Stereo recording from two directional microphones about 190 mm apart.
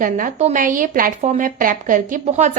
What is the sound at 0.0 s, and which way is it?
A woman's voice, 45° right (ahead or behind).